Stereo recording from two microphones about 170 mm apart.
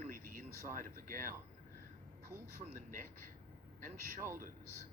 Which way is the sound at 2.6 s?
50° right (ahead or behind).